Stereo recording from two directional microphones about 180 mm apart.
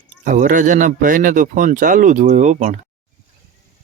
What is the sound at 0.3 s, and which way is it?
A man's voice, 45° right (ahead or behind).